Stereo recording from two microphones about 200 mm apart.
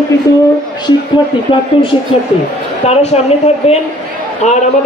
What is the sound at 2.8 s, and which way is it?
A man's voice, 30° left (ahead or behind).